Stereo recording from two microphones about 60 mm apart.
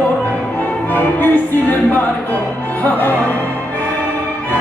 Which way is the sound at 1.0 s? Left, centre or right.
Left.